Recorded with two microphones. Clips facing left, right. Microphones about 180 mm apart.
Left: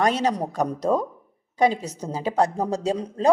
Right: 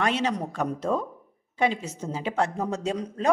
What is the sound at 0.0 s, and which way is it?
A woman's voice, 40° left (ahead or behind).